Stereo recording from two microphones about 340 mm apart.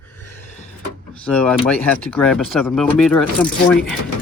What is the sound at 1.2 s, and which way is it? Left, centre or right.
Speech, centre.